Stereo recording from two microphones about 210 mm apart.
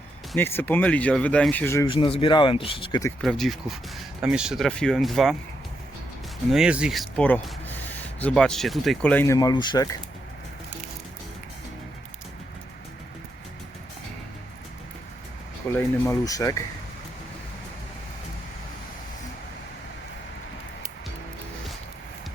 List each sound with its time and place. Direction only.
0.3 s speech: 10° left (ahead or behind)
1.9 s speech: 25° left (ahead or behind)
3.2 s speech: centre (ahead or behind)
6.5 s speech: 5° right (ahead or behind); by 9.9 s 20° left (ahead or behind)
15.6 s speech: 10° left (ahead or behind)